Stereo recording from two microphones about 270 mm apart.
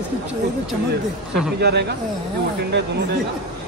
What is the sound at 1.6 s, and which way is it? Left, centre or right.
Speech, right.